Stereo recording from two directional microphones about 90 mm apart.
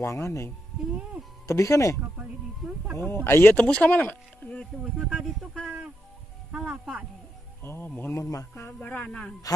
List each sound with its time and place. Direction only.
0.0 s speech: 35° left (ahead or behind)
1.5 s speech: 35° left (ahead or behind)
3.0 s speech: 25° left (ahead or behind)
6.5 s speech: 10° right (ahead or behind)
7.6 s speech: 25° left (ahead or behind)
8.8 s speech: 15° left (ahead or behind)